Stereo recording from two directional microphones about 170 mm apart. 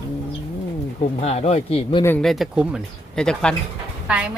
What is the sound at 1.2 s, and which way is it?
Speech, 40° left (ahead or behind).